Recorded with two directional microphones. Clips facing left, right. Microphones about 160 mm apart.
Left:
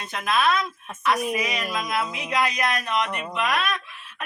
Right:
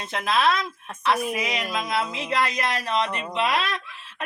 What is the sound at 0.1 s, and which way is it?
Speech, 25° right (ahead or behind).